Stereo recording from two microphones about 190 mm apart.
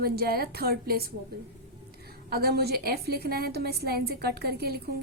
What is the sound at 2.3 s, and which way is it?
A woman's voice, 55° right (ahead or behind).